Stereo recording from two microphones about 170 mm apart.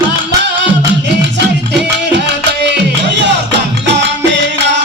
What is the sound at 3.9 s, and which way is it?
Music, 90° right.